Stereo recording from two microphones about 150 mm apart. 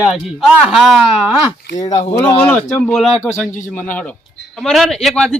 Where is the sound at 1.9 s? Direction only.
45° left (ahead or behind).